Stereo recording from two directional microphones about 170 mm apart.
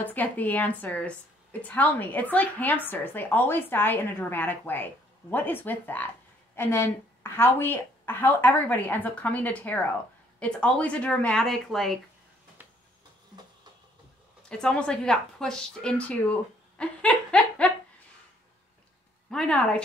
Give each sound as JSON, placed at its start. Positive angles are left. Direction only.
{"t": 0.0, "sound": "a woman's voice", "side_deg": 10}
{"t": 12.6, "sound": "a sound", "side_deg": -10}
{"t": 14.5, "sound": "speech", "side_deg": 5}
{"t": 16.7, "sound": "laughter", "side_deg": 5}
{"t": 19.3, "sound": "a woman's voice", "side_deg": 5}